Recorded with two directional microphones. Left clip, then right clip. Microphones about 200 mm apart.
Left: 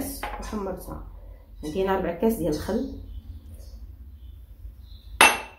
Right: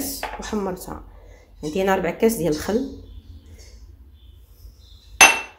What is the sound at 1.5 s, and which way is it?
A woman's voice, 45° right (ahead or behind).